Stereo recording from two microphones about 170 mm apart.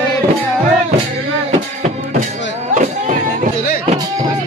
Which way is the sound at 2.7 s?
45° right (ahead or behind).